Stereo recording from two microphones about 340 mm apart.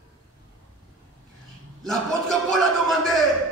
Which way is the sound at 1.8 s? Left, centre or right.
Centre.